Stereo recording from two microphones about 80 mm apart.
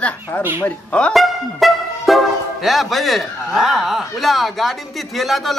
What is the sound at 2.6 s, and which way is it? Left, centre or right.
Speech, centre.